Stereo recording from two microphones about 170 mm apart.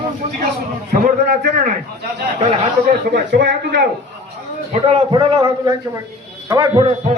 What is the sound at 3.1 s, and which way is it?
Speech, 90° right.